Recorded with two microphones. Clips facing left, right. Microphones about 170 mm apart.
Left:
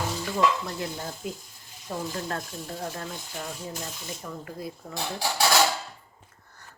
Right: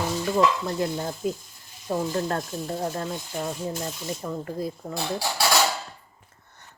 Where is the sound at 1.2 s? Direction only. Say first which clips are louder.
Right 7 dB; 40° right (ahead or behind).